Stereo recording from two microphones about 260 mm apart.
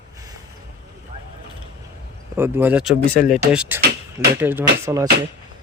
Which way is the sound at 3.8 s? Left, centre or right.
Right.